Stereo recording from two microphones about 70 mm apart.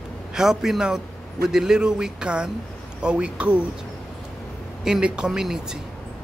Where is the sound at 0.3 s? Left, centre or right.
Centre.